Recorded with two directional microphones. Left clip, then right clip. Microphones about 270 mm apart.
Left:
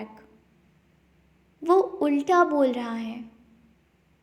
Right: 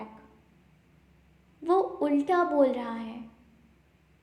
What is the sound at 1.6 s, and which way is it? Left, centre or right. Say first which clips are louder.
A woman's voice: left 4 dB; left.